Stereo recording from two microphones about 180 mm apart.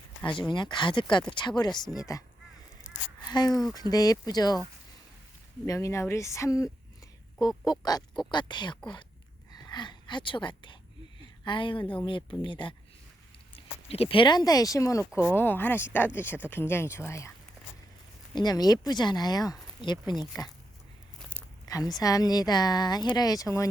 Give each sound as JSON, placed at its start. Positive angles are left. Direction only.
{"t": 0.3, "sound": "speech", "side_deg": 25}
{"t": 3.2, "sound": "a sound", "side_deg": 25}
{"t": 3.5, "sound": "speech", "side_deg": 0}
{"t": 3.8, "sound": "speech", "side_deg": 20}
{"t": 5.6, "sound": "speech", "side_deg": 15}
{"t": 13.8, "sound": "speech", "side_deg": 35}
{"t": 18.3, "sound": "speech", "side_deg": 20}
{"t": 21.3, "sound": "a sound", "side_deg": -10}
{"t": 21.7, "sound": "speech", "side_deg": 20}